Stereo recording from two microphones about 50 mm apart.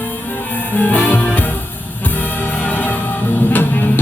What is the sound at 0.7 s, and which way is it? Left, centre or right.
Music, left.